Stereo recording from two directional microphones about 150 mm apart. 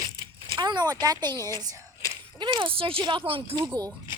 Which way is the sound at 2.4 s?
30° right (ahead or behind).